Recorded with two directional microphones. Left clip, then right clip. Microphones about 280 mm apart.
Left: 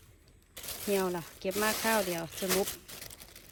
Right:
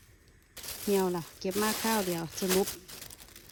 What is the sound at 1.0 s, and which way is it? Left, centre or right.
Speech, centre.